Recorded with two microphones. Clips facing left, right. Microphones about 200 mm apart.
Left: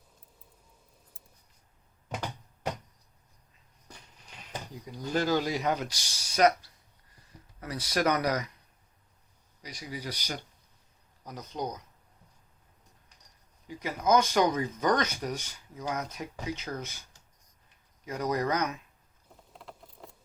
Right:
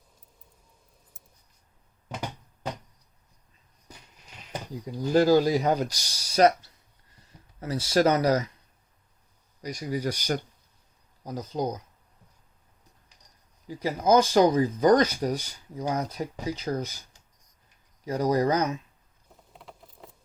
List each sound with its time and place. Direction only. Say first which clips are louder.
4.9 s speech: right 8 dB; 35° right (ahead or behind)
9.6 s speech: right 10 dB; 45° right (ahead or behind)
11.2 s speech: right 6 dB; 30° right (ahead or behind)
13.7 s speech: right 4 dB; 35° right (ahead or behind)
18.0 s speech: right 6 dB; 35° right (ahead or behind)
19.3 s a sound: even; centre (ahead or behind)